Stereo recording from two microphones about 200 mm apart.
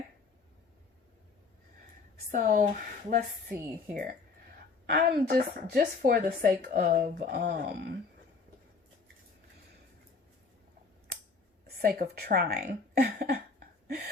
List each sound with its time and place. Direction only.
2.3 s speech: 40° right (ahead or behind)
3.6 s speech: 10° right (ahead or behind)
4.9 s speech: 50° right (ahead or behind)
11.6 s speech: 50° right (ahead or behind)